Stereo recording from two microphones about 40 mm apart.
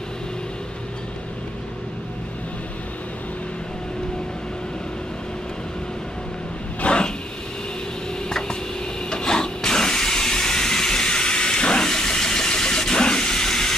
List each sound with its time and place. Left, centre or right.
6.8 s vehicle: left
8.3 s a sound: centre
9.1 s steam: centre